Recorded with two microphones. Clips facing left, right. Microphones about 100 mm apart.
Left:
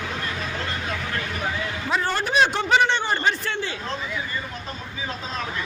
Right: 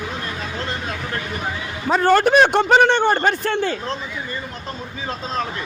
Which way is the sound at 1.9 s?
45° right (ahead or behind).